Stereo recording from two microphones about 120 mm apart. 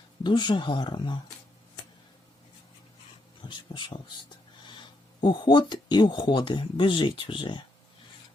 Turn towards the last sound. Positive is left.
turn(degrees=40)  # may be behind; listen again after turning